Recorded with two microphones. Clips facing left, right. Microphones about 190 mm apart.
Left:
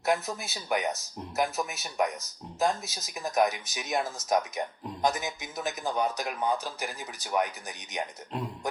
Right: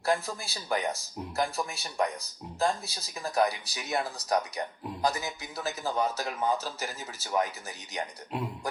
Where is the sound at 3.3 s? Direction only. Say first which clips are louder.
Left 1 dB; 20° left (ahead or behind).